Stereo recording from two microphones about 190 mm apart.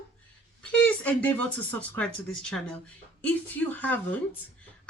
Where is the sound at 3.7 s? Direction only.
10° left (ahead or behind).